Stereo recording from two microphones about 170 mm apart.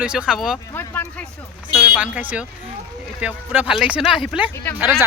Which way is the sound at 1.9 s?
10° right (ahead or behind).